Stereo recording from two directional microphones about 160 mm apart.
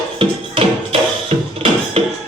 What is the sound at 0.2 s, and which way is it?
Music, 35° right (ahead or behind).